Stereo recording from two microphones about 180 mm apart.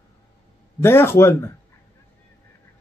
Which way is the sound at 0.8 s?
15° left (ahead or behind).